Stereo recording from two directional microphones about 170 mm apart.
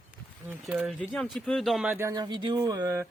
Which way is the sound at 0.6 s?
5° right (ahead or behind).